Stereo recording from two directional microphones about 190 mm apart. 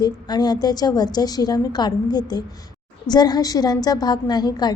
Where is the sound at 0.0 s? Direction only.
20° left (ahead or behind).